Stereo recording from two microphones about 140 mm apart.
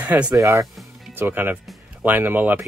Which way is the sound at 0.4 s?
20° right (ahead or behind).